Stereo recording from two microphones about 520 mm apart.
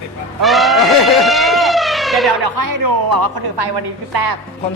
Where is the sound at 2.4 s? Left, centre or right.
Right.